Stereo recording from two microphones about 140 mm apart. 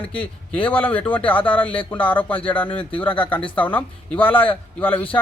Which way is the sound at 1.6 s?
40° left (ahead or behind).